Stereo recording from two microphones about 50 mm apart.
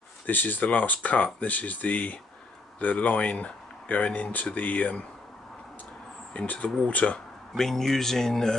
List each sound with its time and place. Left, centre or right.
0.3 s speech: left
6.4 s speech: left
7.5 s a man's voice: centre